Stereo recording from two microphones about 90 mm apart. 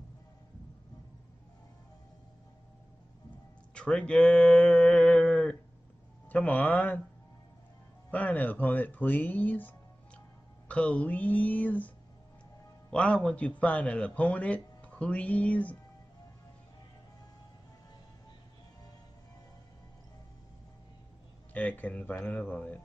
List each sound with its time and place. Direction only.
3.7 s a sound: 10° left (ahead or behind)
6.2 s speech: 15° left (ahead or behind)
8.1 s speech: 15° left (ahead or behind)
12.9 s speech: 15° left (ahead or behind)
21.5 s speech: 15° left (ahead or behind)